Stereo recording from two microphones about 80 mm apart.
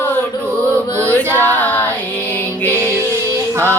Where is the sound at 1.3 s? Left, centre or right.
Left.